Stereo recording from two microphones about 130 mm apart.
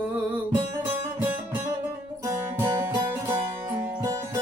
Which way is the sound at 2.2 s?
20° right (ahead or behind).